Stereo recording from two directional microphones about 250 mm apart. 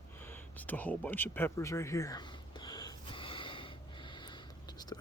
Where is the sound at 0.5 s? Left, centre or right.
Centre.